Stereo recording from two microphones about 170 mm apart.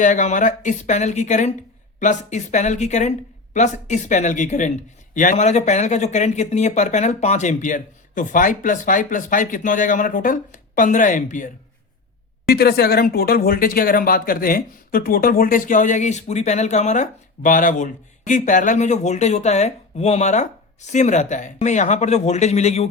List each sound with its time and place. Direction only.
0.0 s speech: 50° left (ahead or behind)
12.5 s speech: 65° left (ahead or behind); by 22.9 s 40° left (ahead or behind)